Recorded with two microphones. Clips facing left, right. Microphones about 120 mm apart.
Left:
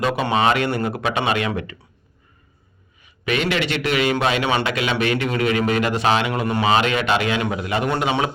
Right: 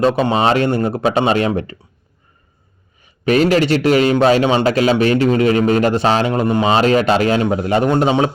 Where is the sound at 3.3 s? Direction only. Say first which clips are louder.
Right 9 dB; 40° right (ahead or behind).